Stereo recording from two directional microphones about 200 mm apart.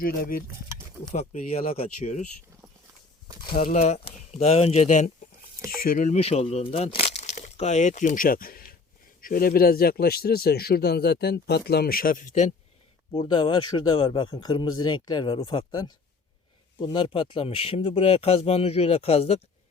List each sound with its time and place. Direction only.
0.0 s a man's voice: 45° left (ahead or behind)
1.1 s speech: 35° left (ahead or behind)
3.6 s a man's voice: 40° left (ahead or behind)
13.1 s speech: 20° left (ahead or behind)
16.8 s speech: 25° left (ahead or behind)